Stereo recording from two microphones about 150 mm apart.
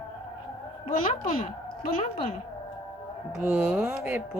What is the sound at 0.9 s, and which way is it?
Speech, 65° left (ahead or behind).